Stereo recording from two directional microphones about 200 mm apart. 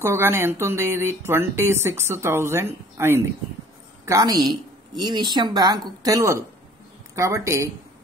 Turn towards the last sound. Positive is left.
turn(degrees=-15)  # may be behind; listen again after turning